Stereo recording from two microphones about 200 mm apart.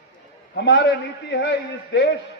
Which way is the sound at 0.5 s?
60° left (ahead or behind).